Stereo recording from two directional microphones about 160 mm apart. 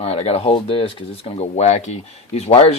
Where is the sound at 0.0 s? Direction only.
40° left (ahead or behind).